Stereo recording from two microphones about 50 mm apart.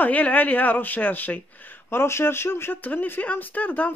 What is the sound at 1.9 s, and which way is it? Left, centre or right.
Speech, left.